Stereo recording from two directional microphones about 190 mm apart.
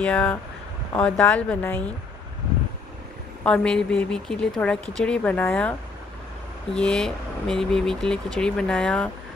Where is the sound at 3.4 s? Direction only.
5° left (ahead or behind).